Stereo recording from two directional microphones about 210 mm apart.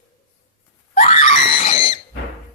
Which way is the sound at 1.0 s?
30° left (ahead or behind).